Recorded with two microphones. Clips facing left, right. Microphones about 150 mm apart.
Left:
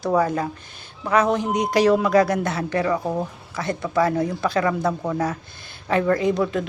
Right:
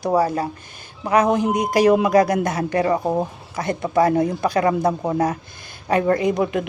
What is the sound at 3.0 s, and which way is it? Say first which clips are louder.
Speech: right 4 dB; 25° right (ahead or behind).